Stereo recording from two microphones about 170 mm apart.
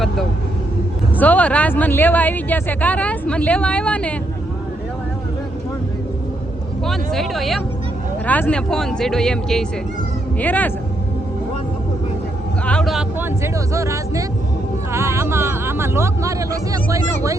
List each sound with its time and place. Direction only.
1.2 s speech: 10° left (ahead or behind)
6.8 s speech: centre (ahead or behind)
12.6 s speech: 5° left (ahead or behind); by 17.3 s 20° right (ahead or behind)